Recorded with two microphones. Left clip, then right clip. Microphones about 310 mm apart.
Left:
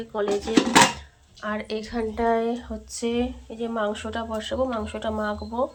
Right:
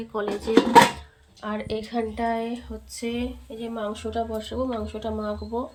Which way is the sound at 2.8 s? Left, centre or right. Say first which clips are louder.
Left 4 dB; centre.